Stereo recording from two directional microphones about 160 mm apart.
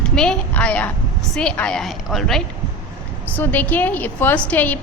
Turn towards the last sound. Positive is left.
turn(degrees=10)  # may be behind; listen again after turning